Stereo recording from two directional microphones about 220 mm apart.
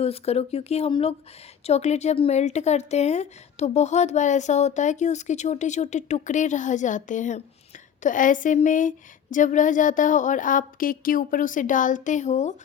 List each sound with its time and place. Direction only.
0.0 s speech: 25° left (ahead or behind)